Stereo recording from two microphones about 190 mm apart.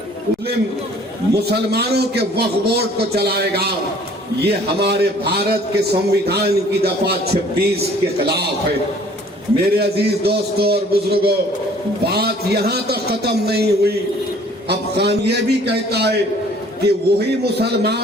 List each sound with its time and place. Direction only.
1.3 s a man's voice: 55° right (ahead or behind)
9.7 s a man's voice: 60° right (ahead or behind)